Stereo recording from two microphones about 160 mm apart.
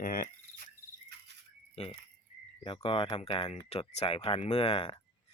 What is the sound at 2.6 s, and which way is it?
Speech, 35° left (ahead or behind).